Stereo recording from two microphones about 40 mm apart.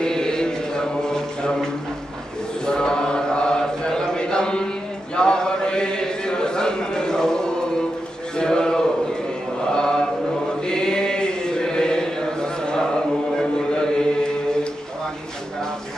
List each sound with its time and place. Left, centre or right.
0.0 s mantra: centre
2.6 s chant: centre
5.1 s a sound: left
9.7 s mantra: centre
10.6 s chant: centre
13.4 s a sound: left